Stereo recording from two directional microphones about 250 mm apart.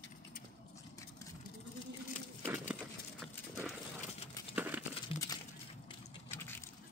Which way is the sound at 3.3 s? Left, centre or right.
Centre.